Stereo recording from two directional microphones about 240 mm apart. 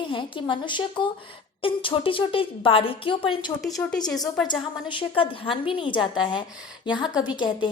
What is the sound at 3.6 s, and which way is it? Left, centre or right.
Speech, centre.